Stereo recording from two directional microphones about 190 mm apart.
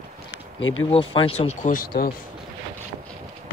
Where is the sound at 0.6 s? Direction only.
90° left.